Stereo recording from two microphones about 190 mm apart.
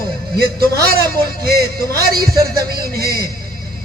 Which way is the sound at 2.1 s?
55° right (ahead or behind).